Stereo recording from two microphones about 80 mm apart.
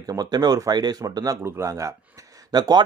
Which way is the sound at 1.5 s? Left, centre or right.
Right.